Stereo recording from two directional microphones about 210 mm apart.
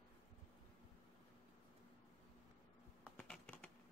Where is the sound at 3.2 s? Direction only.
5° left (ahead or behind).